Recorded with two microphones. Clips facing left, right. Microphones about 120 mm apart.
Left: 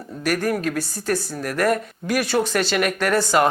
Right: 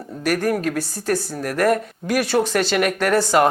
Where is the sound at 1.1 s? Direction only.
35° right (ahead or behind).